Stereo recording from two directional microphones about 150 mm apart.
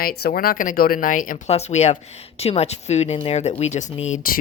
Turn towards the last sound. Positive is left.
turn(degrees=50)  # may be behind; listen again after turning